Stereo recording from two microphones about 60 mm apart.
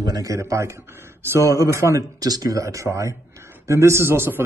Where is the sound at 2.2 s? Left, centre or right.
Right.